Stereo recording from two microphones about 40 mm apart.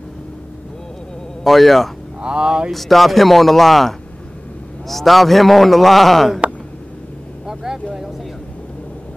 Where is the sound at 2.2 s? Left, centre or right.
Right.